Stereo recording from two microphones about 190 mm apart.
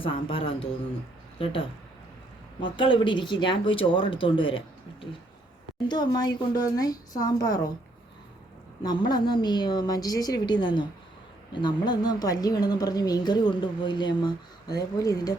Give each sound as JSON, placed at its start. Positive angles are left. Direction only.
{"t": 0.0, "sound": "a woman's voice", "side_deg": 30}
{"t": 2.7, "sound": "a woman's voice", "side_deg": 25}
{"t": 8.8, "sound": "a woman's voice", "side_deg": 20}